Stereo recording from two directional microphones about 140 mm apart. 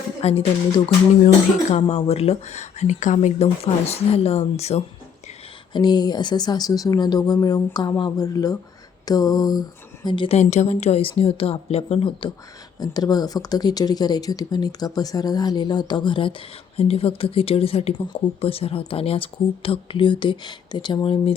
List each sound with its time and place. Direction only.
0.2 s speech: 45° left (ahead or behind)
1.9 s speech: 50° left (ahead or behind)
5.7 s speech: 30° left (ahead or behind)
10.3 s speech: 55° left (ahead or behind)
12.8 s speech: 30° left (ahead or behind)